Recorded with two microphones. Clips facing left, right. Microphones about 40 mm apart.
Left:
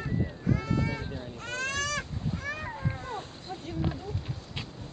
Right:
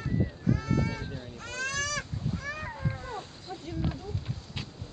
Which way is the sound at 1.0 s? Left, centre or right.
Centre.